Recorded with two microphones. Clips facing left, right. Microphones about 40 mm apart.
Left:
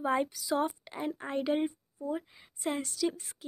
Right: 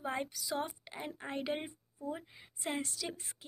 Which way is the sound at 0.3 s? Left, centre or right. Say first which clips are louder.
Left 7 dB; centre.